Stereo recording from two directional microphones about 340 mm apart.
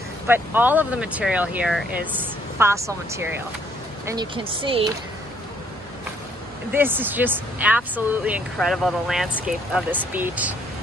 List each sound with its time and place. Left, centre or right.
0.3 s speech: centre
6.7 s speech: centre